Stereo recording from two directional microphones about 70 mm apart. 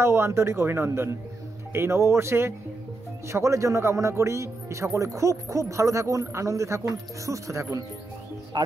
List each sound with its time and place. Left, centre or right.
0.0 s speech: right
8.5 s speech: right